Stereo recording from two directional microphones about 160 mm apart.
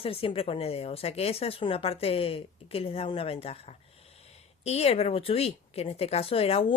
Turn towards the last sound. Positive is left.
turn(degrees=35)  # may be behind; listen again after turning